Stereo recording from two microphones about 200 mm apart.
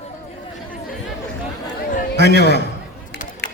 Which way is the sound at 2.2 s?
55° left (ahead or behind).